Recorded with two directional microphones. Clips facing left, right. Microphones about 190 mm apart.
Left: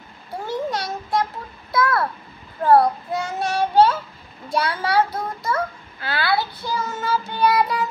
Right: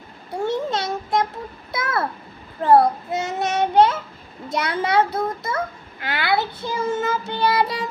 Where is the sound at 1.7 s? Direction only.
25° right (ahead or behind).